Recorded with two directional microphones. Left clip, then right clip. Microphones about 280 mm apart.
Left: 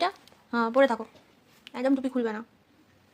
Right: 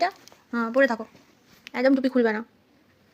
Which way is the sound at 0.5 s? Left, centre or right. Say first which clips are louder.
Right 1 dB; centre.